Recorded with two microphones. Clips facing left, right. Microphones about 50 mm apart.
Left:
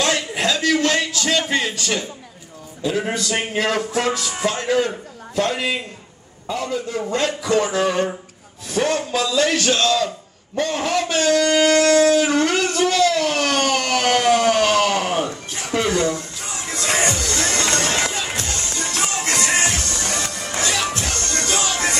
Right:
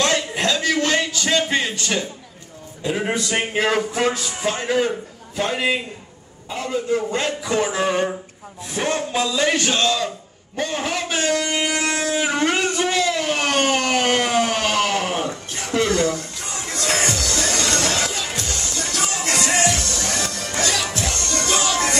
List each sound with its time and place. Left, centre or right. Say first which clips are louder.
0.0 s a sound: even; centre
3.0 s speech: right 2 dB; centre
7.1 s speech: left 2 dB; centre
16.7 s music: left 1 dB; centre
17.2 s music: left 1 dB; left